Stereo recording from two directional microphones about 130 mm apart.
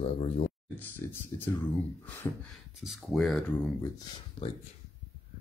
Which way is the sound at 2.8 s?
Centre (ahead or behind).